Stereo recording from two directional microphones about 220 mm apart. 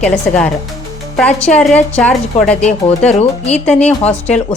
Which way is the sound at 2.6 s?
30° left (ahead or behind).